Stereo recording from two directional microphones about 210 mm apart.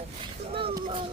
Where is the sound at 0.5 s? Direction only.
25° right (ahead or behind).